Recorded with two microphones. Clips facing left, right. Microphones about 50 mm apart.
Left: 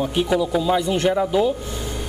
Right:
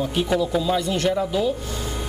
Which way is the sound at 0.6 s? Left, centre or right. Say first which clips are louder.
Left 3 dB; centre.